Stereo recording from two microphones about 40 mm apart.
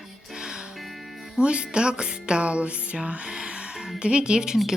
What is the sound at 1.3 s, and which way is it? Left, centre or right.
Music, right.